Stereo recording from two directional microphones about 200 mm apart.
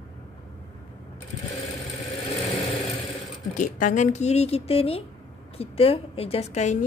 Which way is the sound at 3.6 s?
40° left (ahead or behind).